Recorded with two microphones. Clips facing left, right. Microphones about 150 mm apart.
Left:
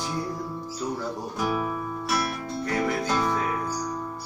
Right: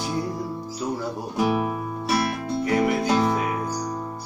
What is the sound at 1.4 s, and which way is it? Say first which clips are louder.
Music: right 5 dB; 20° right (ahead or behind).